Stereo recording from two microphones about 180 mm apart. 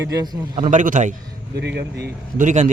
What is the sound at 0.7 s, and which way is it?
Speech, 45° right (ahead or behind).